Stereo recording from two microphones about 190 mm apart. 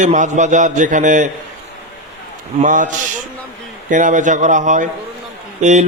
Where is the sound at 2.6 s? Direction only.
40° right (ahead or behind).